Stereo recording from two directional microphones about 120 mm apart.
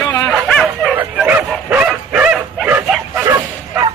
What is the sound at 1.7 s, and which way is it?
Bow-wow, 15° right (ahead or behind).